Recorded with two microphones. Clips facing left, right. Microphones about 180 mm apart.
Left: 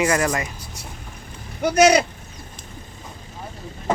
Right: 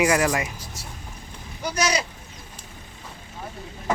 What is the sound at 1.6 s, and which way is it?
Speech, 60° left (ahead or behind).